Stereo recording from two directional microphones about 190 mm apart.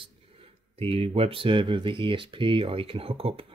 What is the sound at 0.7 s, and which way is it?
Speech, 30° right (ahead or behind).